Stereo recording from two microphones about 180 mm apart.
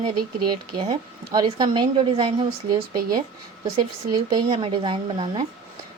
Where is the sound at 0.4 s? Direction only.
25° right (ahead or behind).